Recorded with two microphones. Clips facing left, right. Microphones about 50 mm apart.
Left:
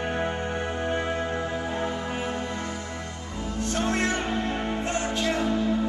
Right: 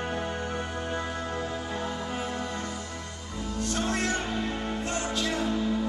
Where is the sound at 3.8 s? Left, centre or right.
Left.